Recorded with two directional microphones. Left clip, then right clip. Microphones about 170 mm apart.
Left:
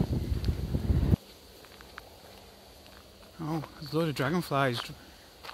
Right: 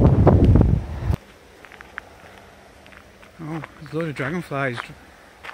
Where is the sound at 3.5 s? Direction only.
Centre (ahead or behind).